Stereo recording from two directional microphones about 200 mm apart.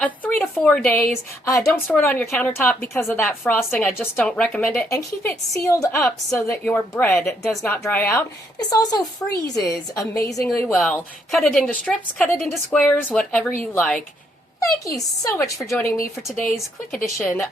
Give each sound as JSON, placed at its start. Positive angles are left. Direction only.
{"t": 0.0, "sound": "a woman's voice", "side_deg": 5}
{"t": 10.6, "sound": "a woman's voice", "side_deg": 5}
{"t": 14.6, "sound": "a woman's voice", "side_deg": 15}